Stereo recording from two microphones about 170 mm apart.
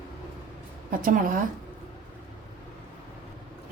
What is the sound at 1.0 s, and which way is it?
Speech, 50° right (ahead or behind).